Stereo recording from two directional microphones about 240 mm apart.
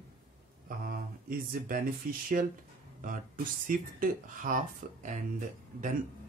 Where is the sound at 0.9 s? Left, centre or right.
Right.